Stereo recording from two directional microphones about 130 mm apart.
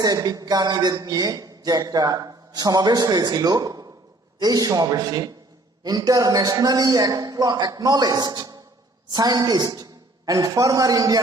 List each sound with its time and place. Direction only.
0.0 s a woman's voice: 30° right (ahead or behind)